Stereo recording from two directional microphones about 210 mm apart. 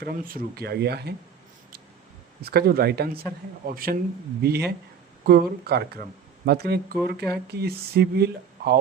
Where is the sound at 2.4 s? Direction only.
50° right (ahead or behind).